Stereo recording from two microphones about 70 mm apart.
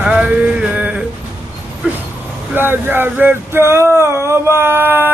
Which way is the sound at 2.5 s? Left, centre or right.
Right.